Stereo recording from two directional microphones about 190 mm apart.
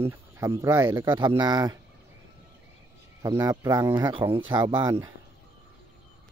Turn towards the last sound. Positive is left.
turn(degrees=-10)  # may be behind; listen again after turning